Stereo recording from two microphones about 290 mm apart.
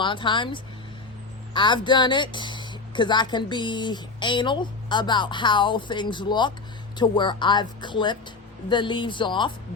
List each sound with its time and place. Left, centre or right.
0.0 s speech: centre